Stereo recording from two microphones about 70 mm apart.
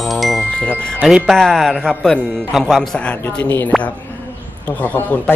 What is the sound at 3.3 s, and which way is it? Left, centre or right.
Speech, left.